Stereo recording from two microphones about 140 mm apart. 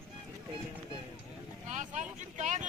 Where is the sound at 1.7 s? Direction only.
60° right (ahead or behind).